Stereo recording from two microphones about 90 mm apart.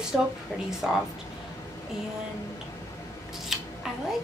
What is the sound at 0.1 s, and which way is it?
Speech, 5° left (ahead or behind).